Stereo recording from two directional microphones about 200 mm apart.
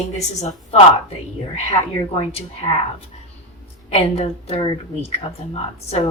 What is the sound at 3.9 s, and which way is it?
A woman's voice, 30° left (ahead or behind).